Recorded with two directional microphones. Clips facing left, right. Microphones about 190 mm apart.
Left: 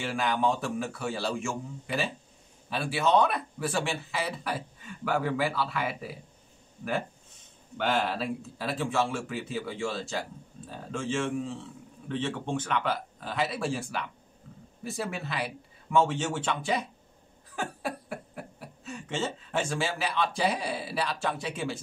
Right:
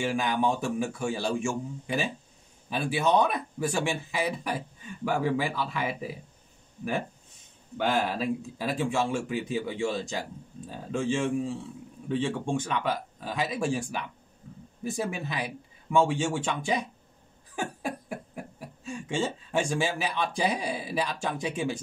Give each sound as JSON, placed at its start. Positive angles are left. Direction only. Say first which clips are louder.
{"t": 0.0, "sound": "speech", "louder": "right 1 dB", "side_deg": -15}
{"t": 7.7, "sound": "speech", "louder": "right 1 dB", "side_deg": -10}
{"t": 17.6, "sound": "a sound", "louder": "right 1 dB", "side_deg": -15}
{"t": 18.9, "sound": "speech", "louder": "right 3 dB", "side_deg": -10}